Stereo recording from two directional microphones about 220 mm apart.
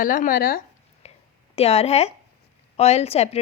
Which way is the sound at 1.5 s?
30° left (ahead or behind).